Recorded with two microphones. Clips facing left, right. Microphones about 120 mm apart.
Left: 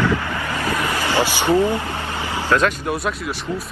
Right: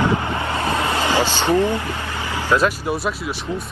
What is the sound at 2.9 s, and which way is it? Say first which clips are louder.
Speech: even; centre (ahead or behind).